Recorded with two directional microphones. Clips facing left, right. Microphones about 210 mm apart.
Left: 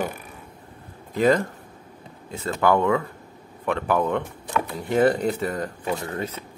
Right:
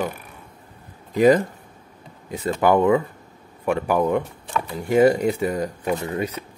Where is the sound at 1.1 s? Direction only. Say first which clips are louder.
Right 4 dB; 15° right (ahead or behind).